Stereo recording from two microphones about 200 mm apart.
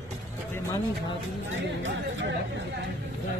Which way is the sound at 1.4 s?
70° right (ahead or behind).